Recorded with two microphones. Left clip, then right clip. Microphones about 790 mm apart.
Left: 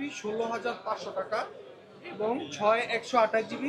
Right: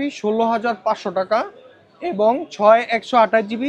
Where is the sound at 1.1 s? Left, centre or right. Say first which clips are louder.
Right 13 dB; right.